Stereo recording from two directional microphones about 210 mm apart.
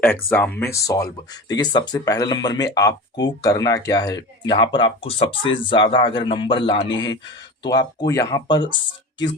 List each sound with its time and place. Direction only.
0.3 s speech: 10° left (ahead or behind)